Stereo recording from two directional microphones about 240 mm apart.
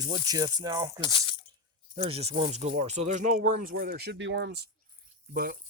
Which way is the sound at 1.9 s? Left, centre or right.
Right.